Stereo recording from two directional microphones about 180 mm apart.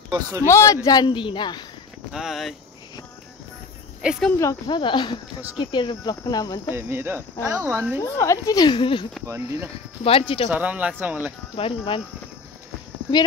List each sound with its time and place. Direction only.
0.5 s speech: 15° left (ahead or behind)
2.1 s speech: centre (ahead or behind)
4.0 s speech: 5° right (ahead or behind)
4.4 s speech: 20° left (ahead or behind)
6.7 s speech: 10° right (ahead or behind)
8.0 s speech: 15° left (ahead or behind)
9.2 s speech: 15° right (ahead or behind)
10.0 s speech: 30° left (ahead or behind)
10.5 s speech: 10° right (ahead or behind)
11.5 s speech: 30° left (ahead or behind)